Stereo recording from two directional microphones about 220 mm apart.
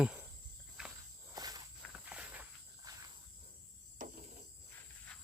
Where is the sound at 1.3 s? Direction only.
15° right (ahead or behind).